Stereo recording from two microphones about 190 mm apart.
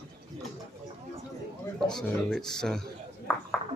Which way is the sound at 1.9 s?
Centre (ahead or behind).